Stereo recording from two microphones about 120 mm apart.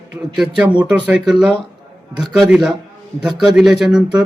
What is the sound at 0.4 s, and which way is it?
A man's voice, 5° right (ahead or behind).